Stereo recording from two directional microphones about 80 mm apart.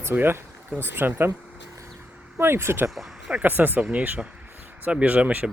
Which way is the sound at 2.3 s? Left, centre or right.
Right.